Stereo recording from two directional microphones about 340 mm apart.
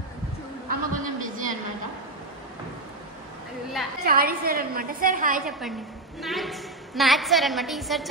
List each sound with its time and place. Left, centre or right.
0.7 s a sound: right
4.0 s a woman's voice: right
6.2 s a woman's voice: centre